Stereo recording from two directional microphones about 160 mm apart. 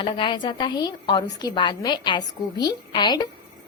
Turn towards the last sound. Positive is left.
turn(degrees=25)  # may be behind; listen again after turning